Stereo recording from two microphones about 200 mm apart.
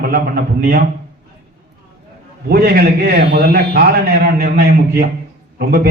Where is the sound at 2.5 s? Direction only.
50° right (ahead or behind).